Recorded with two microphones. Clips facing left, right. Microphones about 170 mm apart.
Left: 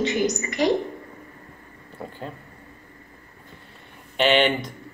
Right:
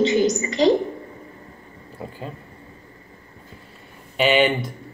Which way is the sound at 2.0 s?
5° right (ahead or behind).